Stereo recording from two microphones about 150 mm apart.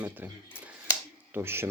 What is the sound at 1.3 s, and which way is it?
Speech, 15° right (ahead or behind).